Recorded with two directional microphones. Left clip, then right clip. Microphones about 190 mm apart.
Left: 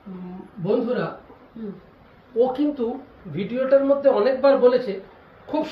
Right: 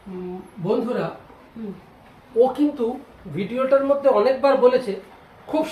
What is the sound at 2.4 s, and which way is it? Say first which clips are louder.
A man's voice: right 2 dB; 15° right (ahead or behind).